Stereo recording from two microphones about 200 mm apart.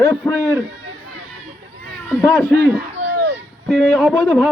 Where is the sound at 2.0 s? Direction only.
10° left (ahead or behind).